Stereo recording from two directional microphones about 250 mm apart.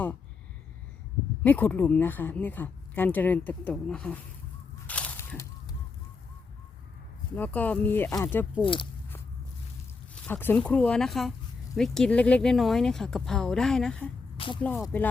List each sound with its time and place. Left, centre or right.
1.5 s speech: centre
4.9 s a sound: centre
7.3 s speech: centre
8.6 s speech: centre
10.2 s speech: centre
14.3 s music: centre
14.6 s speech: centre